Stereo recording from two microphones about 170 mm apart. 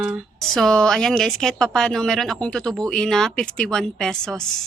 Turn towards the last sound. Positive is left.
turn(degrees=5)  # may be behind; listen again after turning